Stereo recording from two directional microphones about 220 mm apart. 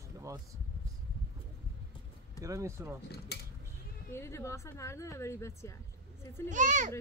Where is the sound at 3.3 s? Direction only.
45° left (ahead or behind).